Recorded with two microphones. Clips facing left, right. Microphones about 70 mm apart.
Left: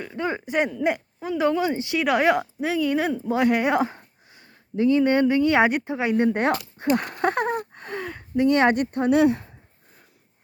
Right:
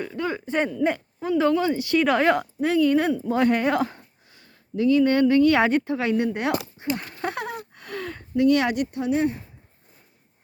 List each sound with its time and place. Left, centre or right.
0.1 s speech: left
0.5 s speech: centre
2.0 s speech: centre
6.1 s speech: left
7.9 s a sound: left
8.6 s speech: left
9.1 s speech: left